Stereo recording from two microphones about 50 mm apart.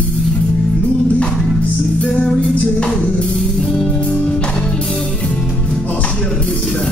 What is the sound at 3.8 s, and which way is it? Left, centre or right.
Music, centre.